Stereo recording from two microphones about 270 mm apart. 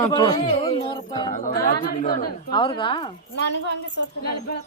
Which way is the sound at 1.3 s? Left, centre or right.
Left.